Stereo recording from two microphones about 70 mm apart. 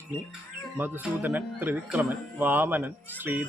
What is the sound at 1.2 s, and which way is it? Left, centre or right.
A woman's voice, right.